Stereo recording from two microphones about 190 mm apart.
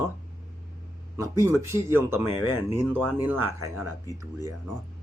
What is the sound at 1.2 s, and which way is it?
Speech, 15° right (ahead or behind).